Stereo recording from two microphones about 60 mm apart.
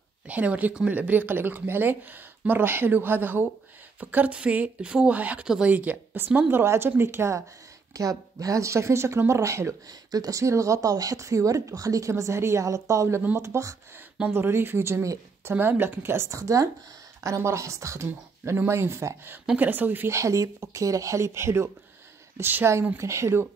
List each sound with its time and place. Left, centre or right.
0.3 s speech: right
6.5 s speech: right
7.9 s speech: right
10.1 s speech: right
12.1 s speech: right
12.6 s speech: right
14.3 s speech: right
15.5 s speech: right
16.3 s speech: right
19.5 s speech: right
20.1 s speech: right
22.4 s speech: right
22.9 s speech: right